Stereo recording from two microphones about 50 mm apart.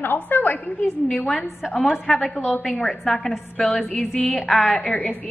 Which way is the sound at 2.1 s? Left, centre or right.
Centre.